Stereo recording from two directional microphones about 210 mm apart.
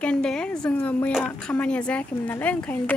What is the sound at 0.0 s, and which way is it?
A woman's voice, 5° left (ahead or behind).